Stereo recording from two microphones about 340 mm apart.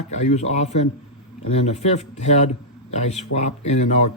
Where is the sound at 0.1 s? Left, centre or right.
Centre.